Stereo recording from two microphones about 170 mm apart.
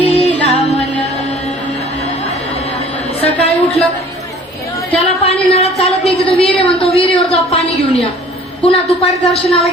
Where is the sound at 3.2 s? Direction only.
35° left (ahead or behind).